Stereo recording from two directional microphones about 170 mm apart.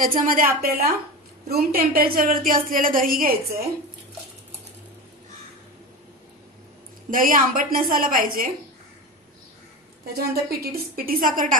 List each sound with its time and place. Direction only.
0.0 s a woman's voice: 55° right (ahead or behind)
7.1 s a woman's voice: 55° right (ahead or behind)
10.3 s a woman's voice: 65° right (ahead or behind)